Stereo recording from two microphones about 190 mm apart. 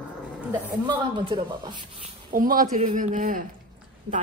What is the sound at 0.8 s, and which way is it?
A man's voice, 25° right (ahead or behind).